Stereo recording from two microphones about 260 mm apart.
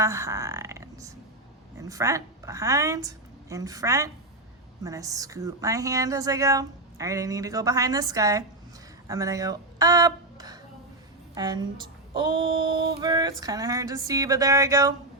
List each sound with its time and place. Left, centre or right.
0.0 s a woman's voice: centre